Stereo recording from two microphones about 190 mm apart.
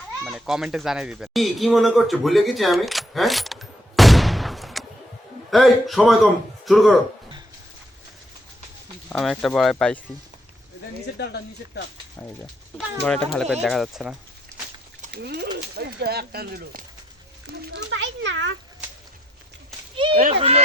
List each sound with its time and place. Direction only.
0.3 s speech: centre (ahead or behind)
9.0 s speech: 5° left (ahead or behind)
11.2 s speech: 60° left (ahead or behind)
13.1 s speech: 5° left (ahead or behind)
14.5 s pig: 15° right (ahead or behind)
15.1 s speech: 60° right (ahead or behind)
17.4 s a child's voice: 60° right (ahead or behind)
20.0 s speech: 25° right (ahead or behind)